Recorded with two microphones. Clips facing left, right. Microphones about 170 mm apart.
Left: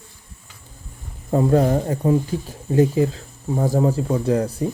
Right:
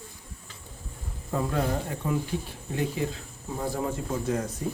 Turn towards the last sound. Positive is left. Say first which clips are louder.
# left 9 dB
turn(degrees=35)  # may be behind; listen again after turning